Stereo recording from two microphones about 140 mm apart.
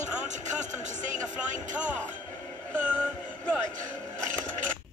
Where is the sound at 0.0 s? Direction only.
60° right (ahead or behind).